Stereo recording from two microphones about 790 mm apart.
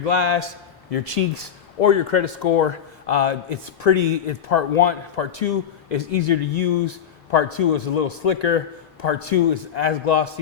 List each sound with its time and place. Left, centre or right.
0.0 s a man's voice: left
0.9 s speech: left
1.8 s a man's voice: left